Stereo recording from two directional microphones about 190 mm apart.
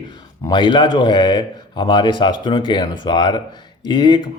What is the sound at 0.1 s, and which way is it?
Speech, 25° left (ahead or behind).